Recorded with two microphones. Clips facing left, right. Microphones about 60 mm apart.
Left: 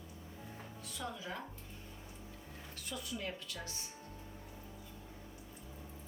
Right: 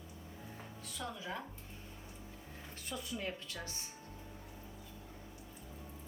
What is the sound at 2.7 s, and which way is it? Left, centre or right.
Speech, right.